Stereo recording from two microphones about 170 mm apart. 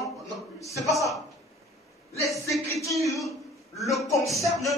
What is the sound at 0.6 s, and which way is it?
Speech, 20° left (ahead or behind).